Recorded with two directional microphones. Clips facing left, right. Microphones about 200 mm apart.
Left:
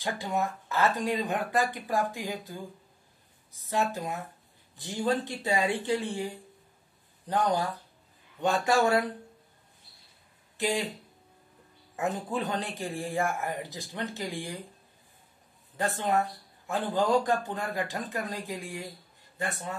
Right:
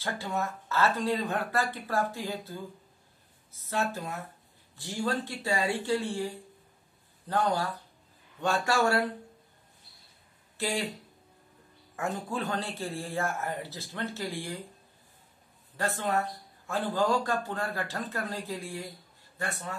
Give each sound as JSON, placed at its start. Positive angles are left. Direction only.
{"t": 0.0, "sound": "speech", "side_deg": 15}
{"t": 10.6, "sound": "speech", "side_deg": 15}
{"t": 11.9, "sound": "speech", "side_deg": 20}
{"t": 15.8, "sound": "speech", "side_deg": 20}